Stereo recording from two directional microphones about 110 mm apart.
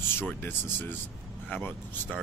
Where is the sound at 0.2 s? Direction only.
20° left (ahead or behind).